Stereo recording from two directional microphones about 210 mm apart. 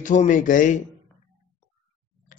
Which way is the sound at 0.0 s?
35° left (ahead or behind).